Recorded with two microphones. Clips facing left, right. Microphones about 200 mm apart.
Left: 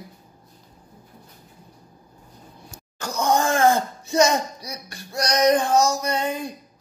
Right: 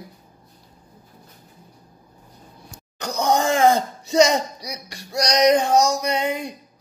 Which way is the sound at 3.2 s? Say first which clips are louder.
Right 1 dB; 20° right (ahead or behind).